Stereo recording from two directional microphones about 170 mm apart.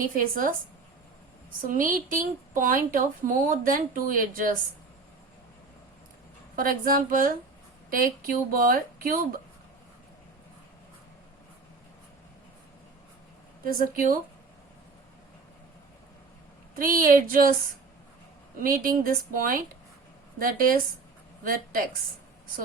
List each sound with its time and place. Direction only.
0.0 s a woman's voice: 55° right (ahead or behind)
1.6 s speech: 55° right (ahead or behind)
6.6 s a woman's voice: 60° right (ahead or behind)
13.7 s a woman's voice: 55° right (ahead or behind)
16.7 s a woman's voice: 55° right (ahead or behind)
18.6 s a woman's voice: 55° right (ahead or behind)